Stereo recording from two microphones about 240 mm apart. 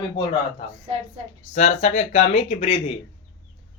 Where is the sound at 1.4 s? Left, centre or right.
Left.